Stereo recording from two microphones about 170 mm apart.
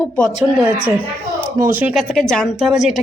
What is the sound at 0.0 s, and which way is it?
A woman's voice, centre (ahead or behind).